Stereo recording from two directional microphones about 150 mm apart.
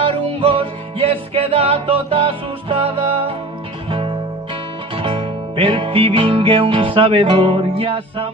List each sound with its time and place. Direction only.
0.0 s music: 35° right (ahead or behind)